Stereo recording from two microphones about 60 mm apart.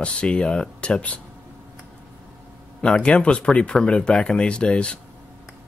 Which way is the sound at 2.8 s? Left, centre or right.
Centre.